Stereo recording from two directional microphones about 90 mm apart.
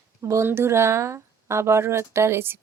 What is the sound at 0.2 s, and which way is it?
Speech, 35° right (ahead or behind).